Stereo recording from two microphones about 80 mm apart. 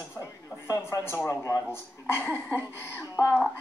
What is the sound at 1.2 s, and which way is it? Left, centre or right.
Speech, left.